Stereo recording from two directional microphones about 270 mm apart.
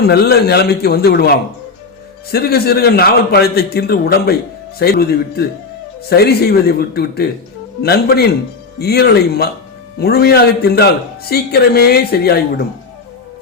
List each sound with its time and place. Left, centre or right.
0.0 s a man's voice: left